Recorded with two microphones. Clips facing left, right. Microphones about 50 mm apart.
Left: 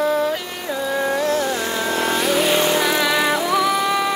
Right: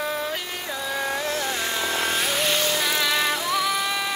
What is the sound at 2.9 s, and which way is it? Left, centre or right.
Music, centre.